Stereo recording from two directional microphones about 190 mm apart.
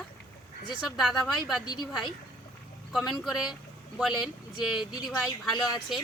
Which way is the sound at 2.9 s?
Centre (ahead or behind).